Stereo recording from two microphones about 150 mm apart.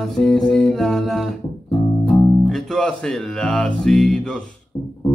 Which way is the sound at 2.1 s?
Centre (ahead or behind).